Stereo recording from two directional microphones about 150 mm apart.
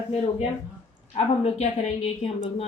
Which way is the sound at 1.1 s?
45° left (ahead or behind).